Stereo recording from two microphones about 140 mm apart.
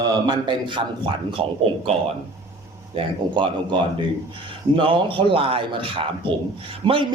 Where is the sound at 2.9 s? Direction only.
35° right (ahead or behind).